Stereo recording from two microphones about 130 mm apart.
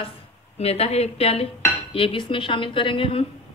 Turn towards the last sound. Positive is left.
turn(degrees=45)  # may be behind; listen again after turning